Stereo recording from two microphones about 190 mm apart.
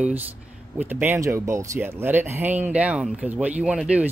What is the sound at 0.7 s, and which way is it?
Speech, 10° right (ahead or behind).